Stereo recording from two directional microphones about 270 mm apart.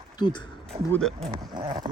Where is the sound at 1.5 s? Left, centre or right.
Centre.